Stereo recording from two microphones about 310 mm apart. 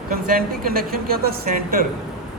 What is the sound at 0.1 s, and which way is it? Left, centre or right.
A woman's voice, right.